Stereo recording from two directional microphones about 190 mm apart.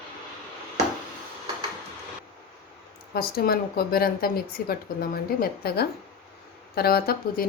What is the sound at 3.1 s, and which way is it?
Speech, 50° left (ahead or behind).